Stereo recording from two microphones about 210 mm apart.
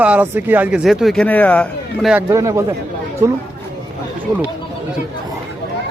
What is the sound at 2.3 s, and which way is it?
Speech, 15° right (ahead or behind).